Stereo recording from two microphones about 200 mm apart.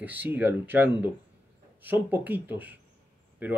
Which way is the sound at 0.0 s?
10° right (ahead or behind).